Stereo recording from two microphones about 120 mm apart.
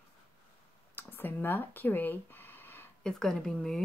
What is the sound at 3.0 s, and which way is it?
Speech, 5° left (ahead or behind).